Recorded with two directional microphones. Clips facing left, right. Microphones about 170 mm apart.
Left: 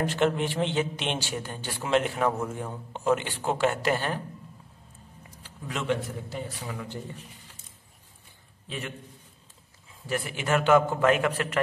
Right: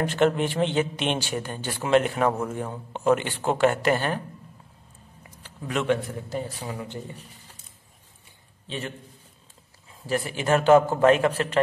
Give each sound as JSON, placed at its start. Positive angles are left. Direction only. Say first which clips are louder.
{"t": 0.0, "sound": "a man's voice", "louder": "right 3 dB", "side_deg": -55}
{"t": 5.4, "sound": "a man's voice", "louder": "right 6 dB", "side_deg": -55}
{"t": 6.7, "sound": "speech", "louder": "right 2 dB", "side_deg": -30}
{"t": 8.6, "sound": "a man's voice", "louder": "right 3 dB", "side_deg": -35}
{"t": 10.0, "sound": "a man's voice", "louder": "right 4 dB", "side_deg": -35}